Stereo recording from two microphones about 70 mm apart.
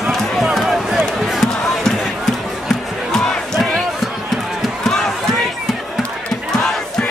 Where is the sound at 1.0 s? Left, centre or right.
Centre.